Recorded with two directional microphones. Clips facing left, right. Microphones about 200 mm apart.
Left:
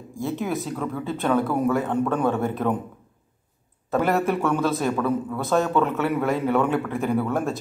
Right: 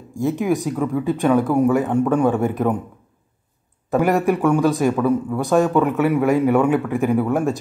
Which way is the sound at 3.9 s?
15° right (ahead or behind).